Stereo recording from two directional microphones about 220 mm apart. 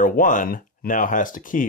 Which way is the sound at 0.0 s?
40° left (ahead or behind).